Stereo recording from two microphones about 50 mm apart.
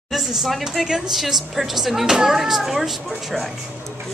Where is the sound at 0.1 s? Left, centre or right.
Centre.